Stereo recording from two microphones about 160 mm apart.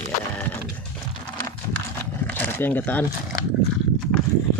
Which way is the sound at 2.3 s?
10° left (ahead or behind).